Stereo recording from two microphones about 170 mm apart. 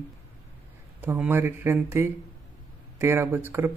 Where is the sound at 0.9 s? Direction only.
10° right (ahead or behind).